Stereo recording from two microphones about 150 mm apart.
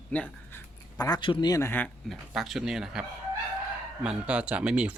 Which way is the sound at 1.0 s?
30° left (ahead or behind).